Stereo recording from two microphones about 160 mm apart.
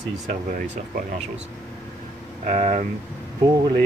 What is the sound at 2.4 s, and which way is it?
Speech, 45° right (ahead or behind).